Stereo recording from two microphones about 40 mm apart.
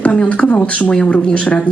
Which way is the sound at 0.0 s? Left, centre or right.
Left.